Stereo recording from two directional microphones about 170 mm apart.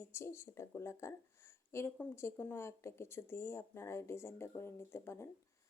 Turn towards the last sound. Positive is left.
turn(degrees=15)  # may be behind; listen again after turning